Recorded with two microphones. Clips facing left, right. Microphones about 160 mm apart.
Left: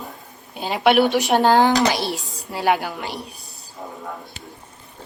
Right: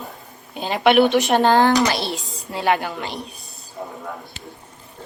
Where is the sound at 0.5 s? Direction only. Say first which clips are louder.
Right 1 dB; 5° left (ahead or behind).